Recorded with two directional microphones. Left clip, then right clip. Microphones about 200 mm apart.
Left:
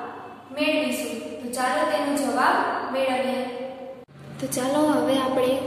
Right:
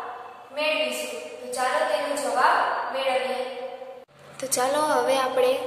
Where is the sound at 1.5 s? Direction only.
Centre (ahead or behind).